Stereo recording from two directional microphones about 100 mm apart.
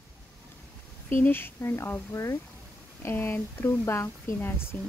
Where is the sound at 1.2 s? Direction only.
20° left (ahead or behind).